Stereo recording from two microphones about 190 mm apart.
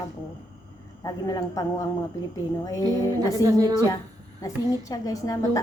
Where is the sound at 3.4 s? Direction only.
20° right (ahead or behind).